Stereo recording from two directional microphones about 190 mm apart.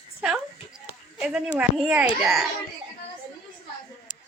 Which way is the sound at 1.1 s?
5° right (ahead or behind).